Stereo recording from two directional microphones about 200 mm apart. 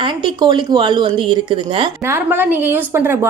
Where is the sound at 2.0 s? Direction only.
10° right (ahead or behind).